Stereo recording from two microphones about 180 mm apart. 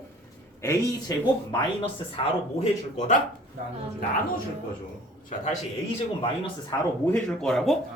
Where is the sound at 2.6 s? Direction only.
40° left (ahead or behind).